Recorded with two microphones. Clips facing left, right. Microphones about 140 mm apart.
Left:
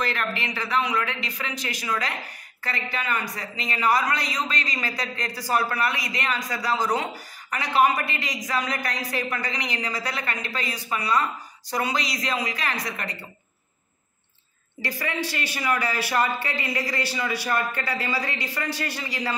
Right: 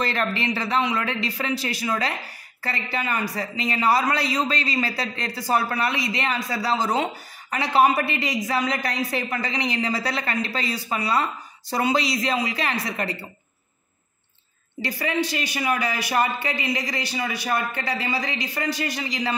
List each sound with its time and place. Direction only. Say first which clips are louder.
0.0 s a man's voice: right 3 dB; 30° right (ahead or behind)
15.0 s a man's voice: right 5 dB; 20° right (ahead or behind)